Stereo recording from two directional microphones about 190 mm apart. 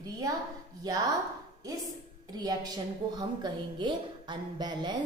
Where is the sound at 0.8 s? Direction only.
20° right (ahead or behind).